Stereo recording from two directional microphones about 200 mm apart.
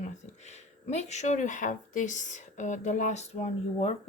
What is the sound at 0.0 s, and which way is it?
Speech, 35° left (ahead or behind).